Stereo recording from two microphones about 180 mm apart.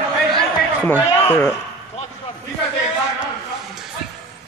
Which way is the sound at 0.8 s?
10° left (ahead or behind).